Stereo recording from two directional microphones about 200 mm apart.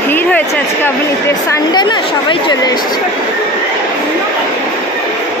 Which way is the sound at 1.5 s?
20° left (ahead or behind).